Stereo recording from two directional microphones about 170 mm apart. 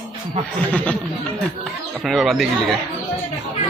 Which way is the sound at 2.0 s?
Centre (ahead or behind).